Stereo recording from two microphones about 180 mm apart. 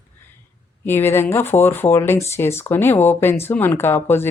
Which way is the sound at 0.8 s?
10° left (ahead or behind).